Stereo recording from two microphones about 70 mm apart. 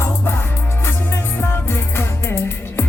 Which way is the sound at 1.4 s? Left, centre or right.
Left.